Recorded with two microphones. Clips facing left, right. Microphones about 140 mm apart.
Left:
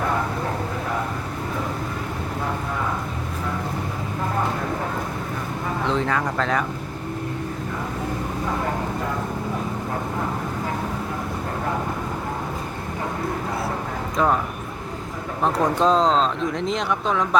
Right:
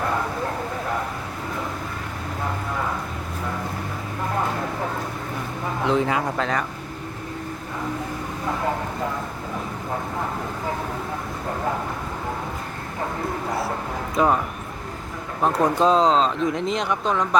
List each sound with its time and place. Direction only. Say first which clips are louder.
5.9 s speech: right 2 dB; 10° right (ahead or behind)
6.4 s speech: left 2 dB; centre (ahead or behind)
14.2 s speech: right 1 dB; 5° right (ahead or behind)
15.4 s speech: right 1 dB; centre (ahead or behind)